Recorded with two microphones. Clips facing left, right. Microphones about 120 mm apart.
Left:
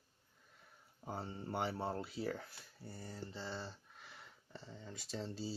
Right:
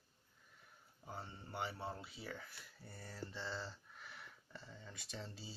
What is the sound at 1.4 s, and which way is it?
Speech, 55° left (ahead or behind).